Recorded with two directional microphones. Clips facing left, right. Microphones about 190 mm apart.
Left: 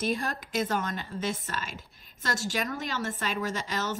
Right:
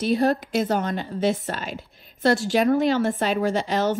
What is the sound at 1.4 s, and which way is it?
A woman's voice, 45° left (ahead or behind).